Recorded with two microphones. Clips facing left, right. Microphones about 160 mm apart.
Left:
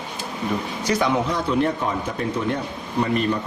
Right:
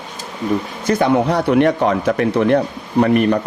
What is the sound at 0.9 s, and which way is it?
Speech, 60° right (ahead or behind).